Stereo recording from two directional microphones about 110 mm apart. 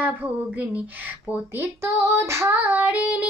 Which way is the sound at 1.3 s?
25° right (ahead or behind).